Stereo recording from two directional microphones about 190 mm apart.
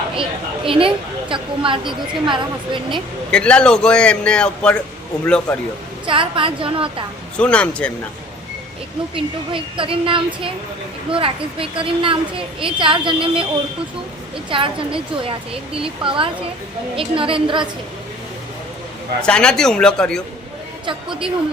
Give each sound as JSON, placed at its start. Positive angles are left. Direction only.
{"t": 0.2, "sound": "a woman's voice", "side_deg": -25}
{"t": 3.3, "sound": "a man's voice", "side_deg": 5}
{"t": 6.1, "sound": "a woman's voice", "side_deg": -25}
{"t": 7.3, "sound": "a man's voice", "side_deg": 5}
{"t": 9.1, "sound": "a woman's voice", "side_deg": -25}
{"t": 14.5, "sound": "a woman's voice", "side_deg": -25}
{"t": 19.2, "sound": "a man's voice", "side_deg": 5}
{"t": 20.8, "sound": "a woman's voice", "side_deg": -25}